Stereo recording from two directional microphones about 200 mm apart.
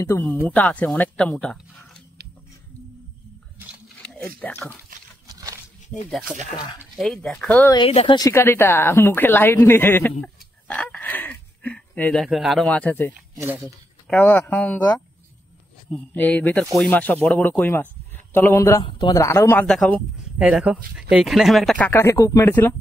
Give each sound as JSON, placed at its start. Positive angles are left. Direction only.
{"t": 0.0, "sound": "speech", "side_deg": 10}
{"t": 4.0, "sound": "a sound", "side_deg": 5}
{"t": 4.4, "sound": "speech", "side_deg": 10}
{"t": 5.3, "sound": "a sound", "side_deg": -15}
{"t": 6.0, "sound": "speech", "side_deg": 5}
{"t": 6.5, "sound": "speech", "side_deg": 20}
{"t": 7.0, "sound": "speech", "side_deg": 0}
{"t": 7.7, "sound": "speech", "side_deg": 30}
{"t": 8.2, "sound": "speech", "side_deg": 15}
{"t": 10.2, "sound": "a sound", "side_deg": 5}
{"t": 13.4, "sound": "speech", "side_deg": -10}
{"t": 13.7, "sound": "speech", "side_deg": 5}
{"t": 19.6, "sound": "speech", "side_deg": 0}